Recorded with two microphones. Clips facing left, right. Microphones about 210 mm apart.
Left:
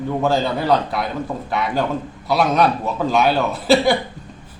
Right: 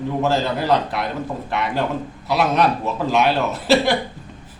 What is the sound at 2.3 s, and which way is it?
A man's voice, centre (ahead or behind).